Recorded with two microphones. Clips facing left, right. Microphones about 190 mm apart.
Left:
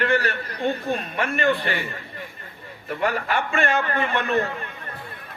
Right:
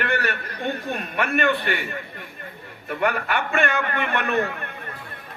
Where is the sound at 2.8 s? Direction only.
60° right (ahead or behind).